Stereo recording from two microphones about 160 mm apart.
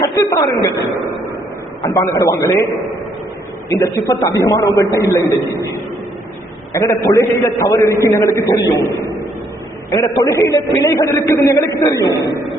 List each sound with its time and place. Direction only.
0.0 s a sound: 20° left (ahead or behind)
1.8 s a man's voice: 20° left (ahead or behind)
3.7 s a man's voice: 20° left (ahead or behind)
6.7 s a man's voice: 15° left (ahead or behind)
10.2 s a man's voice: 20° left (ahead or behind)